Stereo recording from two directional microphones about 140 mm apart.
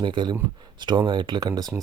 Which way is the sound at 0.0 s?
35° right (ahead or behind).